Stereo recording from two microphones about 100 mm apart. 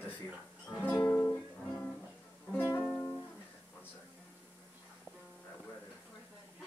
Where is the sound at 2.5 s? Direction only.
20° left (ahead or behind).